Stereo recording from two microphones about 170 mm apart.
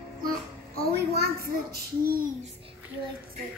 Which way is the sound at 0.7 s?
65° right (ahead or behind).